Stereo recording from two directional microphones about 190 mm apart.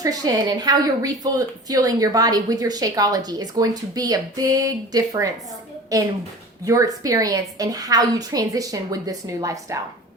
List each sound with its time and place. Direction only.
0.0 s a woman's voice: 20° right (ahead or behind)